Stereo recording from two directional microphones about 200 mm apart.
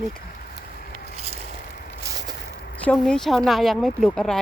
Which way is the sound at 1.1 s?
30° right (ahead or behind).